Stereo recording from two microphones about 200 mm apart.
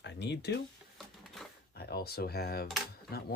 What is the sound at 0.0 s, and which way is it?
Speech, 60° left (ahead or behind).